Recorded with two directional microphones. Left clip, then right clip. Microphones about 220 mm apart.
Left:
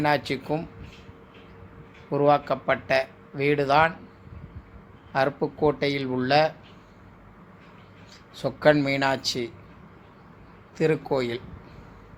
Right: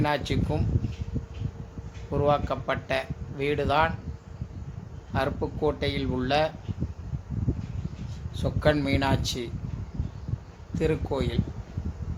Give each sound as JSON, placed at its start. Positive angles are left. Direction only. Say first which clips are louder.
{"t": 0.0, "sound": "speech", "louder": "left 3 dB", "side_deg": 15}
{"t": 2.0, "sound": "speech", "louder": "left 4 dB", "side_deg": 15}
{"t": 5.1, "sound": "speech", "louder": "left 4 dB", "side_deg": 15}
{"t": 8.4, "sound": "speech", "louder": "left 5 dB", "side_deg": 15}
{"t": 10.8, "sound": "speech", "louder": "left 4 dB", "side_deg": 15}